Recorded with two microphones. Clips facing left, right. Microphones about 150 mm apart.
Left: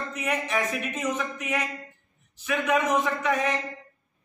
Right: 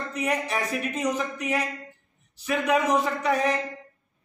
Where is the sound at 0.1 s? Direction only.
35° right (ahead or behind).